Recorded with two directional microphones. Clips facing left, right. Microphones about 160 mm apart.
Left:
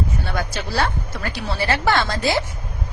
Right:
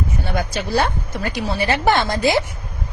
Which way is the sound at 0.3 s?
15° right (ahead or behind).